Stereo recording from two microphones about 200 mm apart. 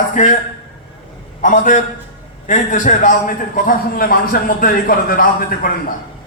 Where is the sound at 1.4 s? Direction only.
40° left (ahead or behind).